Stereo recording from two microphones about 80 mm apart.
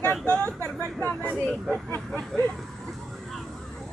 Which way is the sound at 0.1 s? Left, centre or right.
Centre.